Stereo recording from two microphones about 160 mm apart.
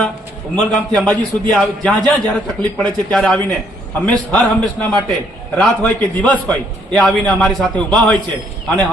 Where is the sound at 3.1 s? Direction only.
5° left (ahead or behind).